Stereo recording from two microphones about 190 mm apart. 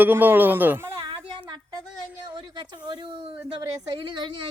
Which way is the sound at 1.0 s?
25° right (ahead or behind).